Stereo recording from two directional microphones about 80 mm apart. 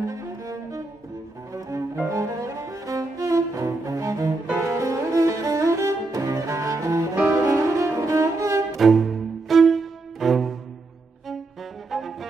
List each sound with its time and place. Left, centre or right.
0.0 s cello: right
7.2 s music: right
8.7 s music: centre
11.9 s music: centre